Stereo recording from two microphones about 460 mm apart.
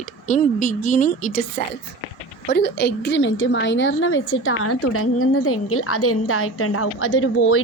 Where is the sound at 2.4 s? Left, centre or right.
Left.